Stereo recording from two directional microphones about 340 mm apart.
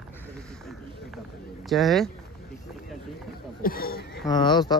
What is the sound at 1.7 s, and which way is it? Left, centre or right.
Speech, centre.